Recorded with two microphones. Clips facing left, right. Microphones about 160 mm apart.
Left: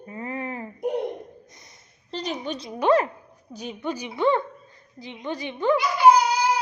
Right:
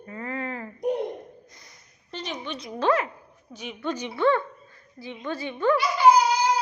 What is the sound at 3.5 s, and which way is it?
Speech, 35° left (ahead or behind).